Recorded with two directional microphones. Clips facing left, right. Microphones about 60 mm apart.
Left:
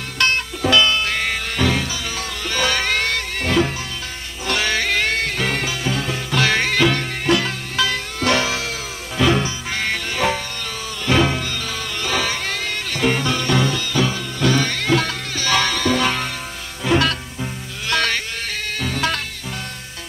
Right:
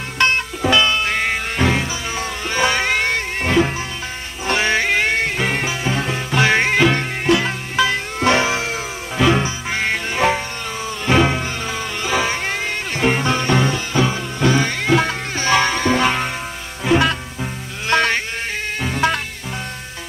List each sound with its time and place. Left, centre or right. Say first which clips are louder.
0.2 s music: right 2 dB; right